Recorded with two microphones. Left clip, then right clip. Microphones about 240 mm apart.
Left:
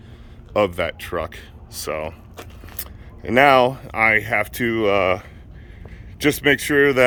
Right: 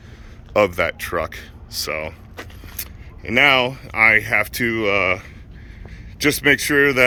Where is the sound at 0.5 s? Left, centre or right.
Centre.